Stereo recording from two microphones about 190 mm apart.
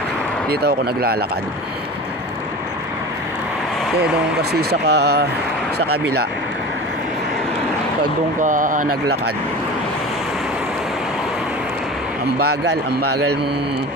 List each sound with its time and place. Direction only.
0.5 s speech: 55° right (ahead or behind)
4.4 s speech: 55° right (ahead or behind)
8.4 s speech: 45° right (ahead or behind)
12.6 s speech: 60° right (ahead or behind)